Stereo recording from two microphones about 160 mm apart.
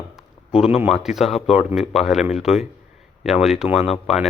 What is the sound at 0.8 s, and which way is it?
A man's voice, centre (ahead or behind).